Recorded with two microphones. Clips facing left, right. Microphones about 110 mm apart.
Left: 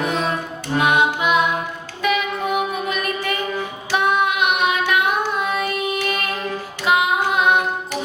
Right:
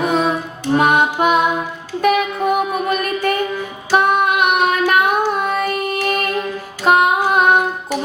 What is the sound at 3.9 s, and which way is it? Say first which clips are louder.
Child singing: right 4 dB; 45° right (ahead or behind).